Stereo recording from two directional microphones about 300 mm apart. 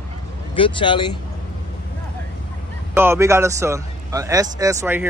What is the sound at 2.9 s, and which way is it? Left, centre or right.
A man's voice, centre.